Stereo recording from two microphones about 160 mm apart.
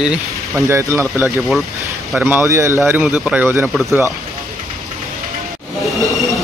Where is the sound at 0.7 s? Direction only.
15° right (ahead or behind).